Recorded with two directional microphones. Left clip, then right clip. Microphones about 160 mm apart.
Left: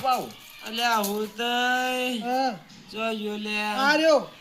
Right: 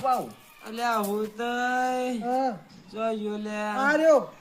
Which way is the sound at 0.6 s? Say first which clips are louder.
Left 3 dB; 15° right (ahead or behind).